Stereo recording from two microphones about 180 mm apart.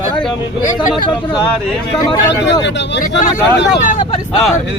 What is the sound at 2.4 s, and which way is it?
Speech, 80° left.